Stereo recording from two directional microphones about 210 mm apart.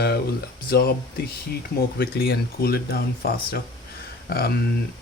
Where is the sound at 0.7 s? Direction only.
45° left (ahead or behind).